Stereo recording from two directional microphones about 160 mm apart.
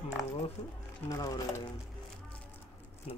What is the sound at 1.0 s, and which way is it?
Speech, 20° left (ahead or behind).